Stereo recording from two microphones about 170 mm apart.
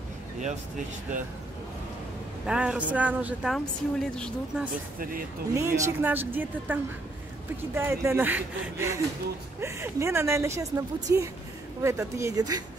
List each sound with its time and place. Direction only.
2.4 s a woman's voice: 5° right (ahead or behind)
3.5 s a woman's voice: centre (ahead or behind)
5.5 s a woman's voice: 15° right (ahead or behind)